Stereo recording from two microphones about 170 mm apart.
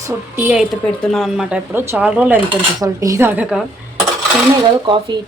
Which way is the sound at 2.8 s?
20° right (ahead or behind).